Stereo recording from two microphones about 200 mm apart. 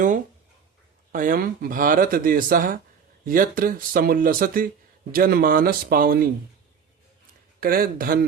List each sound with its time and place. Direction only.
1.1 s speech: 45° right (ahead or behind)
7.6 s speech: 45° right (ahead or behind)